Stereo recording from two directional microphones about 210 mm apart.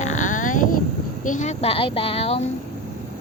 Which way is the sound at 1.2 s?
35° left (ahead or behind).